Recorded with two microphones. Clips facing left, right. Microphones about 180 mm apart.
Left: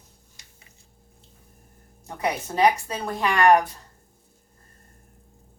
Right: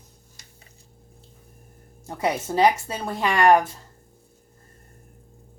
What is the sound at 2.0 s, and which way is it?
Speech, 30° right (ahead or behind).